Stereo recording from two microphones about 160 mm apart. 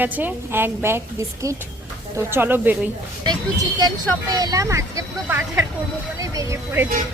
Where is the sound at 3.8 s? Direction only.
25° right (ahead or behind).